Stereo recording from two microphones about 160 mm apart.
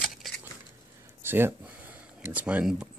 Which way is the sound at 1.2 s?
15° right (ahead or behind).